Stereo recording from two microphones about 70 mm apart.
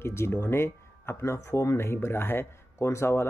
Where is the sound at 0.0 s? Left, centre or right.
Left.